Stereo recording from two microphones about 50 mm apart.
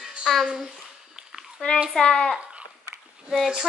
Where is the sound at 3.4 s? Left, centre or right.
Centre.